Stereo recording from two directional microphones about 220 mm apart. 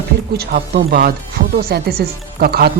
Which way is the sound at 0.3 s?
45° right (ahead or behind).